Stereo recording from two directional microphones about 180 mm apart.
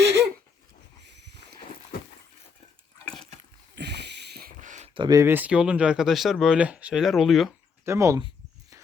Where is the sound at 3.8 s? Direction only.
70° right (ahead or behind); by 4.9 s 45° right (ahead or behind).